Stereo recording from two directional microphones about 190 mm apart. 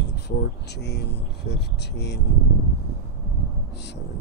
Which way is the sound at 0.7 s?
60° left (ahead or behind).